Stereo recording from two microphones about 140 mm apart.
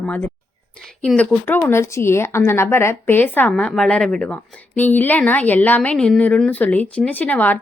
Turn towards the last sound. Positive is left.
turn(degrees=10)  # may be behind; listen again after turning